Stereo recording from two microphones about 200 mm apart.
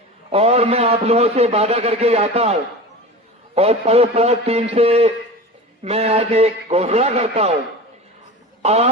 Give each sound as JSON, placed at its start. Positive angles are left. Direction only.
{"t": 0.3, "sound": "a man's voice", "side_deg": -30}
{"t": 8.6, "sound": "speech", "side_deg": -30}